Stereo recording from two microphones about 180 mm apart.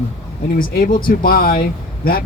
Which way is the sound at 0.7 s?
55° left (ahead or behind).